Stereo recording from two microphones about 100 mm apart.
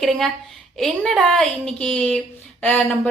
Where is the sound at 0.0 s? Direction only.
Centre (ahead or behind).